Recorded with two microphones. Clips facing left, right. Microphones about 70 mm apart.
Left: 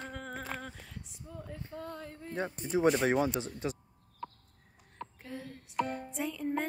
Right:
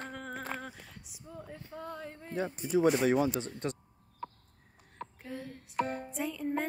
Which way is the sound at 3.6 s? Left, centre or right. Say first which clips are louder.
Even; centre.